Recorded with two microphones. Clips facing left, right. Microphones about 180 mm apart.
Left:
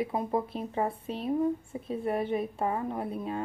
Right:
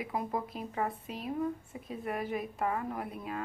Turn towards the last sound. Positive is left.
turn(degrees=30)  # may be behind; listen again after turning